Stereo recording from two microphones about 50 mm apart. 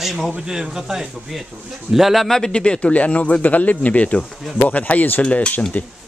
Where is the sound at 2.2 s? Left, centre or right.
Centre; by 5.2 s left.